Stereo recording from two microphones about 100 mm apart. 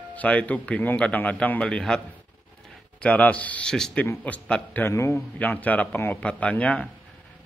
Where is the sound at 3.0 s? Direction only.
15° left (ahead or behind).